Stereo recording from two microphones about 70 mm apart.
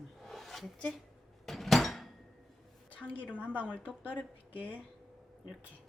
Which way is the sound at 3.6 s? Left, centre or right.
Left.